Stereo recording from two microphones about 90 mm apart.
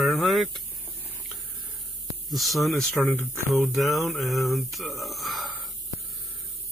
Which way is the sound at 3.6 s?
Centre (ahead or behind).